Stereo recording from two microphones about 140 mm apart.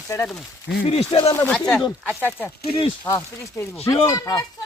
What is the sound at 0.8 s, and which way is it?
Speech, 45° left (ahead or behind).